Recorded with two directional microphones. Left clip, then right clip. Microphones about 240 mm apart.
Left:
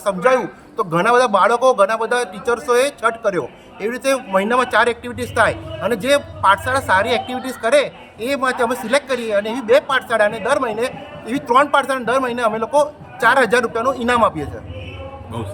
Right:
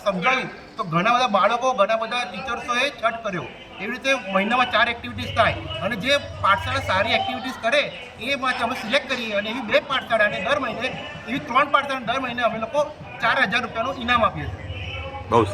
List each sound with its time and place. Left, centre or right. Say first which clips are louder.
0.0 s a man's voice: left 5 dB; centre